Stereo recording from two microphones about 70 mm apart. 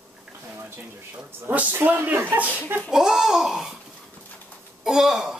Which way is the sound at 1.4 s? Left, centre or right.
Right.